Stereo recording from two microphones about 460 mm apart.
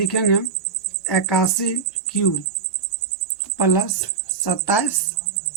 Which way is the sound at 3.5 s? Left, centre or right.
Left.